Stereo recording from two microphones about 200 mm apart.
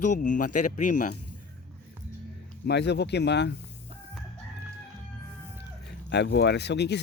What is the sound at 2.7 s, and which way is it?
Speech, 55° left (ahead or behind).